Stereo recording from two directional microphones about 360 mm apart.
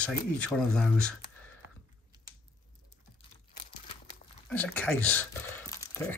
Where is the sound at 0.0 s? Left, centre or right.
Centre.